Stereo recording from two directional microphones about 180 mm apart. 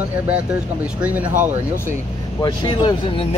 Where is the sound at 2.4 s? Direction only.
25° left (ahead or behind).